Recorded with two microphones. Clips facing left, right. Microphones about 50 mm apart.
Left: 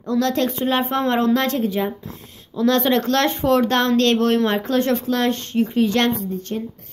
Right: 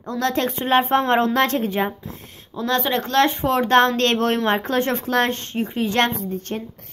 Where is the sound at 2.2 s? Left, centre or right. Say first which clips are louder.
Right 1 dB; right.